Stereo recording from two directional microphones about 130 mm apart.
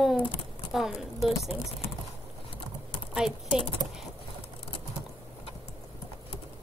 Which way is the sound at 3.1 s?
5° right (ahead or behind).